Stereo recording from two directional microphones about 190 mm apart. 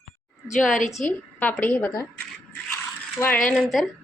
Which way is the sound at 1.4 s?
10° left (ahead or behind).